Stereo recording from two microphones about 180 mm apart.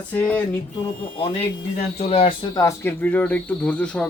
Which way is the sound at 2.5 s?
15° left (ahead or behind).